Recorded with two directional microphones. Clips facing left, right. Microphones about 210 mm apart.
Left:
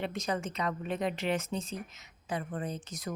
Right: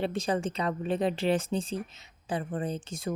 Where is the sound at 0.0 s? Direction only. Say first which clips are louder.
Right 5 dB; 30° right (ahead or behind).